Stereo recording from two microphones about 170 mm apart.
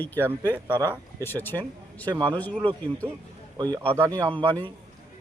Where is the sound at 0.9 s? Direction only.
15° left (ahead or behind).